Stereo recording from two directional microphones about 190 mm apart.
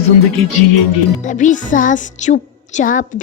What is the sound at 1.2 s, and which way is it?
Speech, 40° left (ahead or behind).